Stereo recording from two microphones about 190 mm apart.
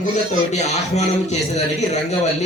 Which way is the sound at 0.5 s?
35° left (ahead or behind).